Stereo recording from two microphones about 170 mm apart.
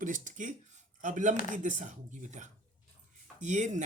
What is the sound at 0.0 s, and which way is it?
Speech, 50° right (ahead or behind).